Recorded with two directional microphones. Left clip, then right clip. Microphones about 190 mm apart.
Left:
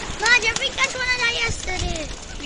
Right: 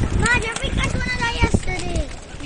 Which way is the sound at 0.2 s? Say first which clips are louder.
Left 3 dB; 55° right (ahead or behind).